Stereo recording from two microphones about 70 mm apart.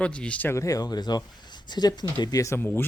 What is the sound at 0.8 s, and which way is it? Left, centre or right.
Speech, left.